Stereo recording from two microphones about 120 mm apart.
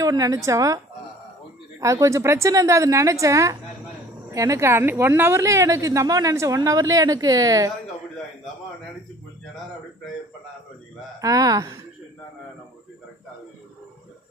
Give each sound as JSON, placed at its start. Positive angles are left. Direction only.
{"t": 0.0, "sound": "a woman's voice", "side_deg": -30}
{"t": 1.8, "sound": "a woman's voice", "side_deg": -25}
{"t": 11.1, "sound": "a woman's voice", "side_deg": -30}